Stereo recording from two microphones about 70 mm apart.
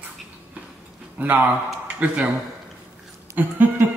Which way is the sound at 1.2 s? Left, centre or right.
Right.